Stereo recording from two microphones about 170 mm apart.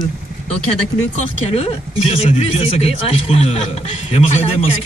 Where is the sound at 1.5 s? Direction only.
35° left (ahead or behind).